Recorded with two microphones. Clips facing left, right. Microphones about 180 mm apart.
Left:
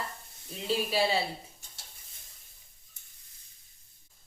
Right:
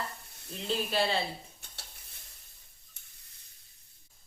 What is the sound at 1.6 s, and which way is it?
Stir, 65° right (ahead or behind).